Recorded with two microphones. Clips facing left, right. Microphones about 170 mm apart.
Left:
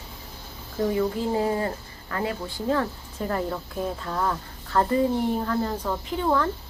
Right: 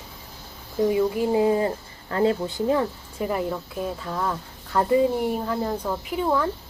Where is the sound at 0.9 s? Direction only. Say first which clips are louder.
Right 3 dB; 15° right (ahead or behind).